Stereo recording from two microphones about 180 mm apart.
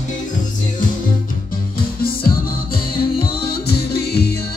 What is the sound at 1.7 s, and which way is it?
Music, 55° left (ahead or behind).